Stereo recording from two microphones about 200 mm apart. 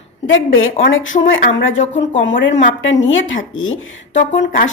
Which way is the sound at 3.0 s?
75° left (ahead or behind).